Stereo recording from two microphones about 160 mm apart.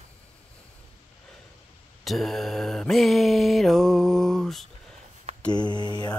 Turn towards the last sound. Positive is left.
turn(degrees=25)  # may be behind; listen again after turning